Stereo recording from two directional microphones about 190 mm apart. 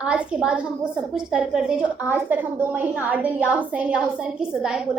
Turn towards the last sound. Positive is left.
turn(degrees=-5)  # may be behind; listen again after turning